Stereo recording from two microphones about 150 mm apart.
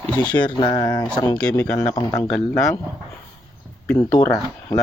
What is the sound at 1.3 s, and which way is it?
Speech, 5° left (ahead or behind).